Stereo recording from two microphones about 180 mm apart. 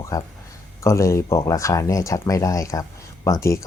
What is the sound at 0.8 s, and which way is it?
Speech, 15° left (ahead or behind).